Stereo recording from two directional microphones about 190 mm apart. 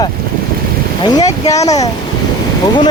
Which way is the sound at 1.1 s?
20° left (ahead or behind).